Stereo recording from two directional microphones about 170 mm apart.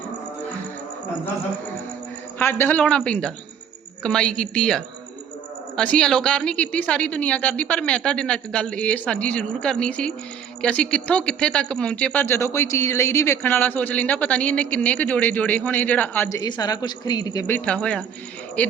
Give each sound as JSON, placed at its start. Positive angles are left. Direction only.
{"t": 2.4, "sound": "a woman's voice", "side_deg": 10}
{"t": 16.4, "sound": "speech", "side_deg": 20}